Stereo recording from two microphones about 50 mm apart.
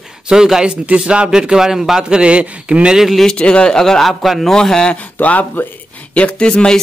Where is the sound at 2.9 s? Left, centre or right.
Centre.